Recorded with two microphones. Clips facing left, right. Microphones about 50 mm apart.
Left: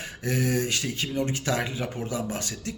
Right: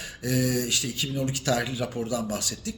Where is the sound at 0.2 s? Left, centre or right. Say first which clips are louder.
Even; left.